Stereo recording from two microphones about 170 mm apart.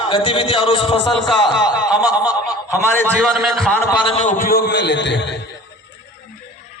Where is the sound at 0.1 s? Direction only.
30° left (ahead or behind).